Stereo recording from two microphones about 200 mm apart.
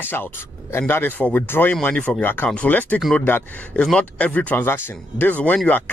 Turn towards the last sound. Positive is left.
turn(degrees=10)  # may be behind; listen again after turning